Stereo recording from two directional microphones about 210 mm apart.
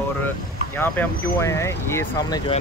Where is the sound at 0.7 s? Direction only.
10° left (ahead or behind).